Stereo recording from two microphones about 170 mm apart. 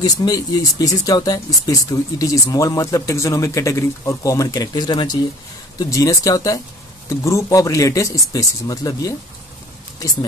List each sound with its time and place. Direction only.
0.0 s speech: 20° left (ahead or behind)